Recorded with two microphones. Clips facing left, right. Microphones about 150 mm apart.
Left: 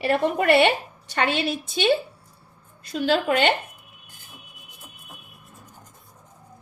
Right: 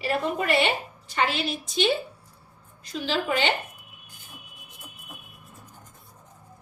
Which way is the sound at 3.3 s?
60° left (ahead or behind).